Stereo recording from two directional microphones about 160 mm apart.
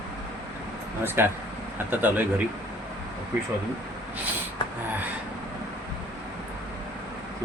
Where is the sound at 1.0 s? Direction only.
15° right (ahead or behind).